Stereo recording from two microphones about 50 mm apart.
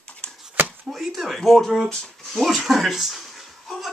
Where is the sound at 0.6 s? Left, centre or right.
Right.